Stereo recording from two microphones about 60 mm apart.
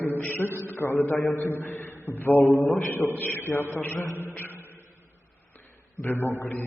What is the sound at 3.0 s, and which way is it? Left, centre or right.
Speech, left.